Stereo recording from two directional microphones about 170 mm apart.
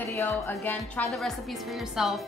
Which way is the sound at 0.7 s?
5° left (ahead or behind).